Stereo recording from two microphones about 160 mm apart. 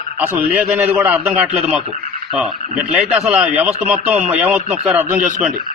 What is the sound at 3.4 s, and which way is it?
A man's voice, 5° right (ahead or behind).